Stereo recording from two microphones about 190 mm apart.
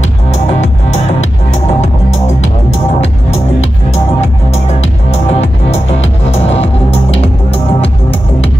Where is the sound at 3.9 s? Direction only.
35° left (ahead or behind).